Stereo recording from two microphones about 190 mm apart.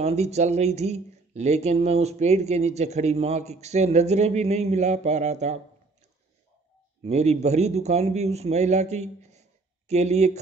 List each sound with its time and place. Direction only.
0.0 s speech: 35° right (ahead or behind)
7.0 s a man's voice: 35° right (ahead or behind)